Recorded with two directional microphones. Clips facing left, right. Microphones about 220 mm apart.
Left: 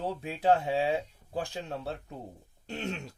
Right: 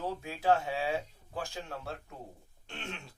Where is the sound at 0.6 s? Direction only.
30° left (ahead or behind).